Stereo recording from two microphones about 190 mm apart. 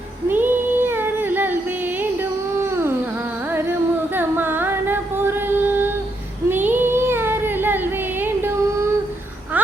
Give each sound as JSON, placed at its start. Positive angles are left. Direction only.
{"t": 0.3, "sound": "child singing", "side_deg": -10}
{"t": 2.6, "sound": "a sound", "side_deg": -15}
{"t": 3.5, "sound": "singing", "side_deg": -10}
{"t": 6.5, "sound": "child singing", "side_deg": -10}